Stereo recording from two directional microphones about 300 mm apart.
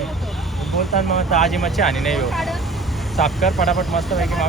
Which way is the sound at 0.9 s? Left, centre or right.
Left.